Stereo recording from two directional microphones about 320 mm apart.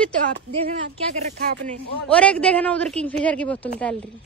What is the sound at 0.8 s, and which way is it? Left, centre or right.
Speech, right.